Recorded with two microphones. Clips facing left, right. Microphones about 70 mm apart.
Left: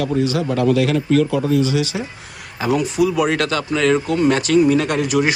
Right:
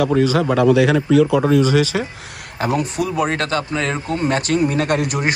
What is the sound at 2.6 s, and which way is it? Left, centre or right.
A man's voice, right.